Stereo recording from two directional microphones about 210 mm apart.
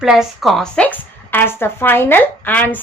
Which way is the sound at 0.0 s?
5° right (ahead or behind).